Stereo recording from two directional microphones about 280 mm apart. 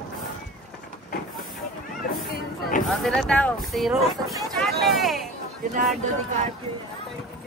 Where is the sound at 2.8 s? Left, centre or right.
Centre.